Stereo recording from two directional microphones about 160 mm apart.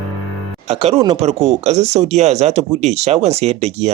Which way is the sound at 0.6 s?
40° right (ahead or behind).